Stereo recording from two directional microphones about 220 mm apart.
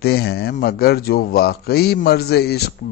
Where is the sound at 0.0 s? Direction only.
45° left (ahead or behind).